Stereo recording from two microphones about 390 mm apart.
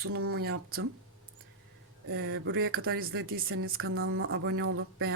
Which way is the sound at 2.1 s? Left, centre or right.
Right.